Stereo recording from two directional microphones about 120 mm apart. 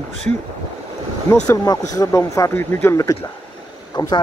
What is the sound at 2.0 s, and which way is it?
Speech, 25° left (ahead or behind).